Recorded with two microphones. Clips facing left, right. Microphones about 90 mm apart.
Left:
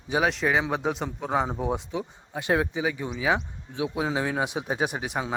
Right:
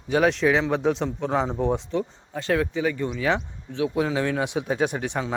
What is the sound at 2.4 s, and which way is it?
Speech, 20° left (ahead or behind).